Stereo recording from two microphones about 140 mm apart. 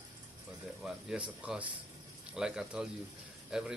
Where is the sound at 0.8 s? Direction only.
5° right (ahead or behind).